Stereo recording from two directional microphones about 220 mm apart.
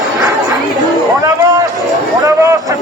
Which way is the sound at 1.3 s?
15° right (ahead or behind).